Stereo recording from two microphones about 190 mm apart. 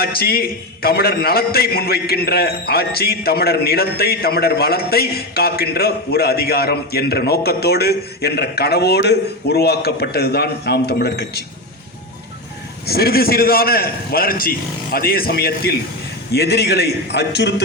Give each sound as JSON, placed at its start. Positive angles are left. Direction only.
{"t": 0.0, "sound": "a man's voice", "side_deg": 55}
{"t": 12.8, "sound": "a man's voice", "side_deg": 55}